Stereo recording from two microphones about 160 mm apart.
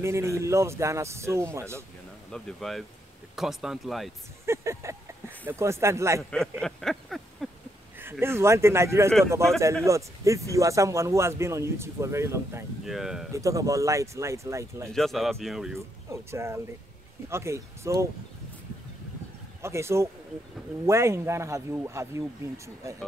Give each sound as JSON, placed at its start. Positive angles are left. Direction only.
{"t": 0.0, "sound": "speech", "side_deg": -15}
{"t": 2.3, "sound": "speech", "side_deg": 0}
{"t": 4.5, "sound": "speech", "side_deg": -15}
{"t": 6.3, "sound": "speech", "side_deg": 5}
{"t": 7.4, "sound": "a sound", "side_deg": 0}
{"t": 8.0, "sound": "speech", "side_deg": -15}
{"t": 12.8, "sound": "speech", "side_deg": 0}
{"t": 13.3, "sound": "speech", "side_deg": -20}
{"t": 14.9, "sound": "speech", "side_deg": 0}
{"t": 16.1, "sound": "speech", "side_deg": -15}
{"t": 19.6, "sound": "speech", "side_deg": -15}